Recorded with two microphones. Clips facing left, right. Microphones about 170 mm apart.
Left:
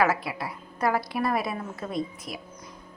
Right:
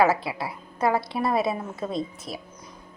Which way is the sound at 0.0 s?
25° right (ahead or behind).